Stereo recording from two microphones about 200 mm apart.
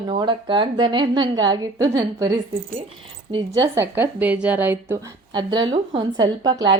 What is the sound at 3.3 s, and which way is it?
A woman's voice, 20° right (ahead or behind).